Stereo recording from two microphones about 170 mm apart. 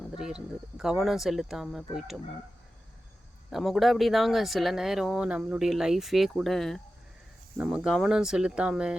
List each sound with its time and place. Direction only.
0.2 s speech: 5° right (ahead or behind)
3.5 s speech: centre (ahead or behind)